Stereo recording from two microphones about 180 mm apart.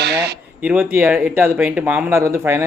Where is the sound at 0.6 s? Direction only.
10° right (ahead or behind).